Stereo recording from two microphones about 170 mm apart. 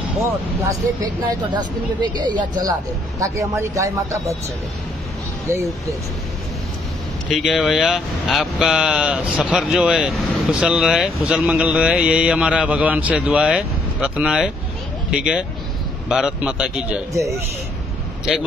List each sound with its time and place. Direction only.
0.7 s speech: 25° right (ahead or behind)
5.5 s speech: 15° right (ahead or behind)
7.2 s speech: centre (ahead or behind)
17.1 s speech: 20° right (ahead or behind)
18.3 s speech: centre (ahead or behind)